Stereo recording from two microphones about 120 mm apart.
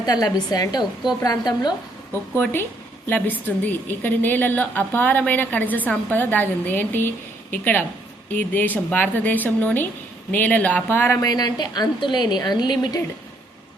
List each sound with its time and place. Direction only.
0.0 s a woman's voice: 30° left (ahead or behind)
2.3 s speech: 20° left (ahead or behind)
11.2 s a woman's voice: 35° left (ahead or behind)